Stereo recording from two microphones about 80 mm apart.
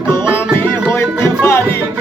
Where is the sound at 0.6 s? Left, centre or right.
Left.